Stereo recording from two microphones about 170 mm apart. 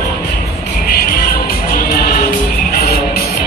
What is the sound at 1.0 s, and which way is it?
Music, 60° left (ahead or behind).